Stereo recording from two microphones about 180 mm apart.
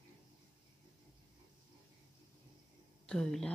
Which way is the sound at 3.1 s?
5° left (ahead or behind).